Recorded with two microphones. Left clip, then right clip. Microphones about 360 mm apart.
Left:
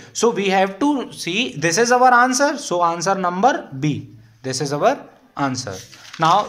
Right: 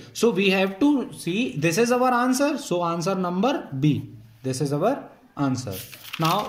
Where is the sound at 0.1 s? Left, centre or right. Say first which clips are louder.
Left 4 dB; centre.